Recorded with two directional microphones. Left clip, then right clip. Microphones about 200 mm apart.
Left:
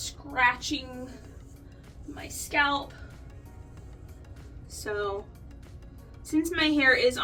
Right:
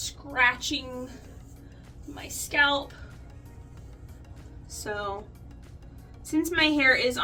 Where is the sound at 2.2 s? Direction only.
20° right (ahead or behind).